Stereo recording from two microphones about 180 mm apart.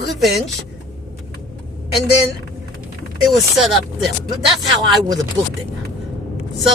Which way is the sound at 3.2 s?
Centre (ahead or behind).